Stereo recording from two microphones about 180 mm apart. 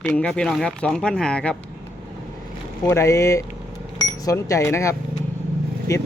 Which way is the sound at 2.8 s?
15° left (ahead or behind).